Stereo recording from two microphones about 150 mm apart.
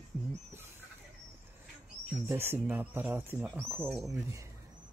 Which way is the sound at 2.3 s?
15° right (ahead or behind).